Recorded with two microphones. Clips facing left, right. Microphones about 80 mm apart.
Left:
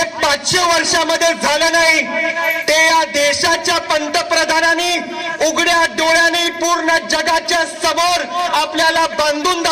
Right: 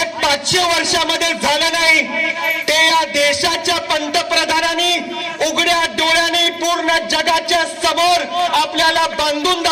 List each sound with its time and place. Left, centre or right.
0.0 s a man's voice: left